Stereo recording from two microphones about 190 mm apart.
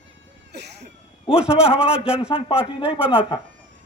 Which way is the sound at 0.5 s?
60° right (ahead or behind).